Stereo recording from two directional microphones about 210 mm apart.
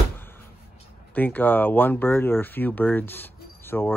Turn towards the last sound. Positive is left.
turn(degrees=10)  # may be behind; listen again after turning